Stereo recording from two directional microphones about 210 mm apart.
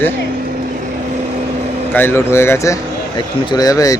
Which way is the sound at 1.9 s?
10° left (ahead or behind).